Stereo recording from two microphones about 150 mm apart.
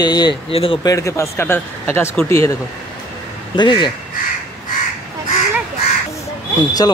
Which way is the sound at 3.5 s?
30° left (ahead or behind).